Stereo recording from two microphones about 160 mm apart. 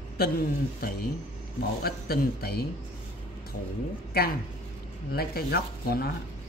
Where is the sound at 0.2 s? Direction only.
70° left (ahead or behind).